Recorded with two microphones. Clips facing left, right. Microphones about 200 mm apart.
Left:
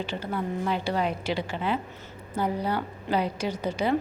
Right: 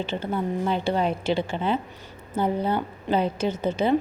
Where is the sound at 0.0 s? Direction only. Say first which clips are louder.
Right 3 dB; 25° right (ahead or behind).